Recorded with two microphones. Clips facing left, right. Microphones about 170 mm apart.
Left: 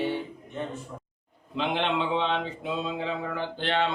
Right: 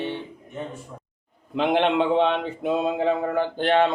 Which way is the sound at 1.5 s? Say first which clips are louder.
Right 7 dB; 50° right (ahead or behind).